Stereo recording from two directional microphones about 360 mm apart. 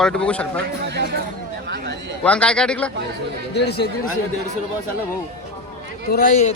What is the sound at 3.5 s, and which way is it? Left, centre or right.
Speech, left.